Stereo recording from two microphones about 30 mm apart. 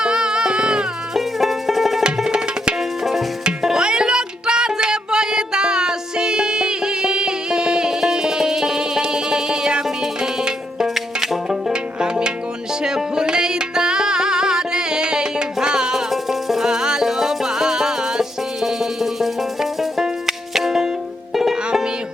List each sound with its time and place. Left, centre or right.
0.0 s music: right
1.1 s music: centre; by 10.8 s right
10.8 s music: centre
11.4 s music: right
16.3 s music: centre
16.6 s music: right